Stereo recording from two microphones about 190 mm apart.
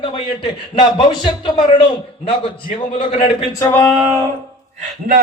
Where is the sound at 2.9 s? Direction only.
30° left (ahead or behind).